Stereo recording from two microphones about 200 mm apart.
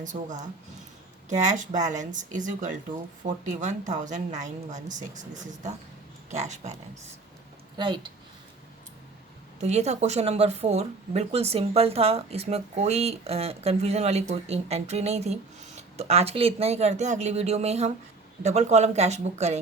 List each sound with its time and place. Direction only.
0.0 s speech: 40° right (ahead or behind)
7.8 s speech: 25° right (ahead or behind)
9.6 s speech: 35° right (ahead or behind)